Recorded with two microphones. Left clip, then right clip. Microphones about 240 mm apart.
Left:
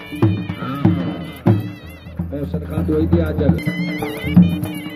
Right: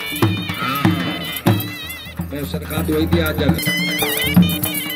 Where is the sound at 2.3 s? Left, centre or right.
Right.